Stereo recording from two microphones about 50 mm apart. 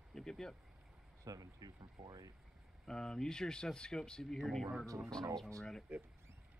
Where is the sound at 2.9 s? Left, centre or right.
Centre.